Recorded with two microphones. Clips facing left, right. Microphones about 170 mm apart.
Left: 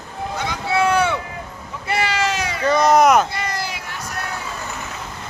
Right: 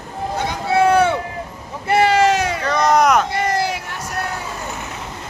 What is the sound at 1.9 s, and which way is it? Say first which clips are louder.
Vehicle: right 7 dB; 50° right (ahead or behind).